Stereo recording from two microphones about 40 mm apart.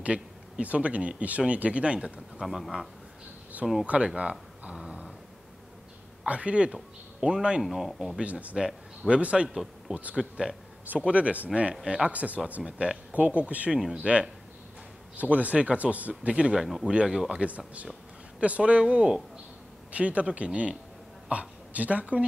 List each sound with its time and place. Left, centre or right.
0.0 s speech: right
2.4 s speech: centre
3.8 s speech: right
4.2 s a sound: right
6.2 s speech: right
7.6 s speech: centre
8.2 s speech: right
9.5 s speech: centre
10.1 s speech: right
12.6 s speech: right
13.1 s speech: right
16.5 s speech: centre
17.4 s a woman's voice: right